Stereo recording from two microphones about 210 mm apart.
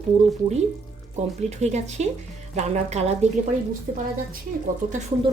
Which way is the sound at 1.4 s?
30° right (ahead or behind).